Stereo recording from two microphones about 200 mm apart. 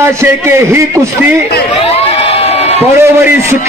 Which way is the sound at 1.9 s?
30° left (ahead or behind).